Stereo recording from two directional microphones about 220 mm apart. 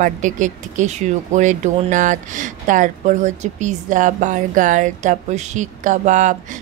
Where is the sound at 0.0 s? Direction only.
35° right (ahead or behind).